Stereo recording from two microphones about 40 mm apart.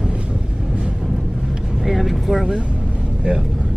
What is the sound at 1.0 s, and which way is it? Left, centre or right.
Vehicle, centre.